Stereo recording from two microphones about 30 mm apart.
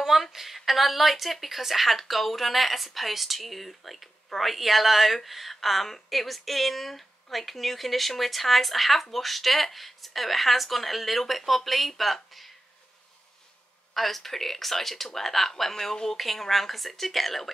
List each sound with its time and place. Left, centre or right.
0.0 s speech: centre
13.9 s speech: centre
16.2 s speech: centre